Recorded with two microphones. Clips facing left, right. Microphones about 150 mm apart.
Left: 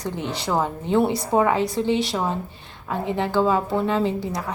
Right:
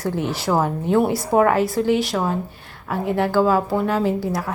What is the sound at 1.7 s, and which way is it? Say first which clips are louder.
Speech: right 3 dB; 25° left (ahead or behind).